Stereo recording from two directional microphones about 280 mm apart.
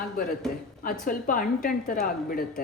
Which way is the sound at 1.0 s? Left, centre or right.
Left.